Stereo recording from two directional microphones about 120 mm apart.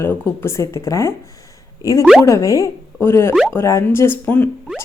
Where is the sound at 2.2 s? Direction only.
25° left (ahead or behind).